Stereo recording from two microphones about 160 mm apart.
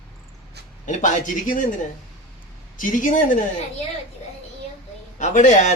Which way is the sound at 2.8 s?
55° left (ahead or behind).